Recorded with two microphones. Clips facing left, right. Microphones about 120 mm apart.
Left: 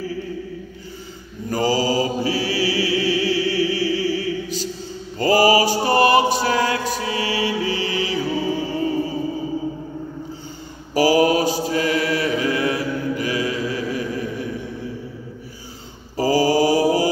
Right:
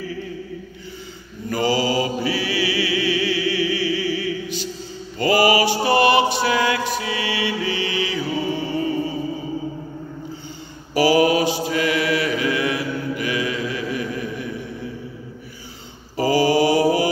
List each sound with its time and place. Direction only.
1.5 s mantra: 40° left (ahead or behind)
11.0 s mantra: 40° left (ahead or behind)
16.2 s mantra: 40° left (ahead or behind)